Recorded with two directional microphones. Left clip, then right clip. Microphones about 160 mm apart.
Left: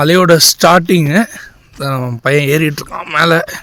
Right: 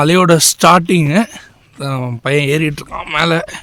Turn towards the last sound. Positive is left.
turn(degrees=0)  # may be behind; listen again after turning